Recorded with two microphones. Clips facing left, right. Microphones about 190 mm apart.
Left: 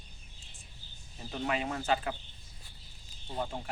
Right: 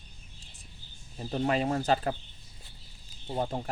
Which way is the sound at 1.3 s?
35° right (ahead or behind).